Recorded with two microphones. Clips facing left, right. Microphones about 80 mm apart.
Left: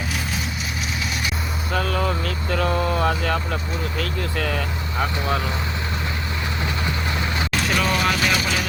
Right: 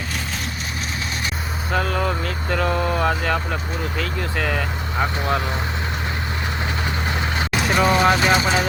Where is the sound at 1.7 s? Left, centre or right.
Right.